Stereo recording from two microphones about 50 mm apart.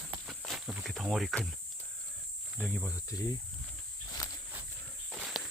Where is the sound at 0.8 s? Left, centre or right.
Centre.